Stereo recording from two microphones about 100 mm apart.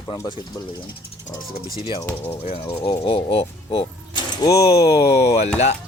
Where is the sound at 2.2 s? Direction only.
80° left.